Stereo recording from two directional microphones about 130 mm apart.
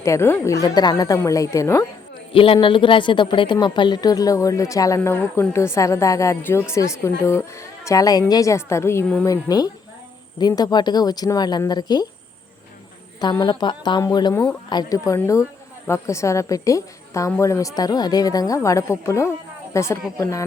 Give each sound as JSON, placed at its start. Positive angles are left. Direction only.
{"t": 0.0, "sound": "a woman's voice", "side_deg": 20}
{"t": 2.3, "sound": "a woman's voice", "side_deg": 45}
{"t": 13.4, "sound": "a woman's voice", "side_deg": 35}